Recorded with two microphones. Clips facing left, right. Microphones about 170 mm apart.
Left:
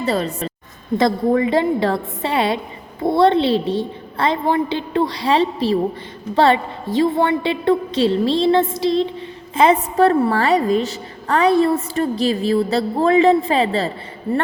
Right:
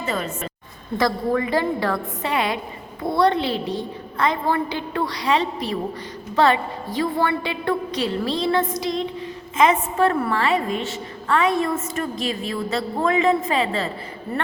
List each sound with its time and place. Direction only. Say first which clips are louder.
0.0 s a woman's voice: left 6 dB; 35° left (ahead or behind)
0.9 s a woman's voice: left 5 dB; 25° left (ahead or behind)